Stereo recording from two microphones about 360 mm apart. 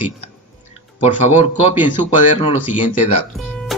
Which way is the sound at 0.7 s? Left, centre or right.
Centre.